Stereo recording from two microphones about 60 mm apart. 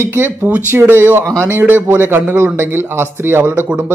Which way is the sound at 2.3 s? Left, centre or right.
Right.